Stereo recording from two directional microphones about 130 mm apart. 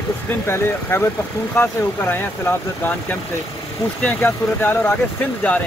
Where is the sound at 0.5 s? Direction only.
20° left (ahead or behind).